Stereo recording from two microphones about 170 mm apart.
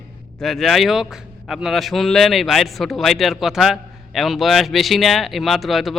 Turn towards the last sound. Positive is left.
turn(degrees=0)  # may be behind; listen again after turning